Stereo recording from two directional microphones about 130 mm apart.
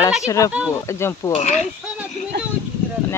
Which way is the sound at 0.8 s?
20° left (ahead or behind).